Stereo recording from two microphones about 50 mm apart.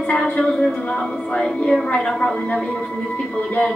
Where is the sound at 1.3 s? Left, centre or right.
Centre.